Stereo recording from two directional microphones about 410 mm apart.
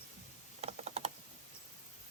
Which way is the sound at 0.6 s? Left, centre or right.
Centre.